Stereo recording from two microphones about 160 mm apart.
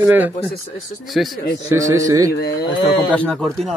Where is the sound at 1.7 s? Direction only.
20° right (ahead or behind).